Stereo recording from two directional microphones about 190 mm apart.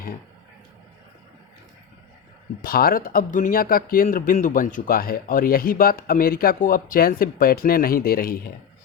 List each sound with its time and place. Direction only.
2.6 s speech: 50° left (ahead or behind)